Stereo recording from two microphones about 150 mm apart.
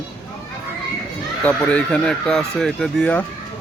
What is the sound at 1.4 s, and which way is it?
Speech, 10° left (ahead or behind).